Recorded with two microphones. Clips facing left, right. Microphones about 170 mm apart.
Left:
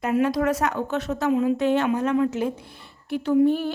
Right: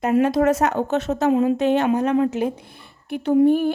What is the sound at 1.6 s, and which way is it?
Speech, 20° right (ahead or behind).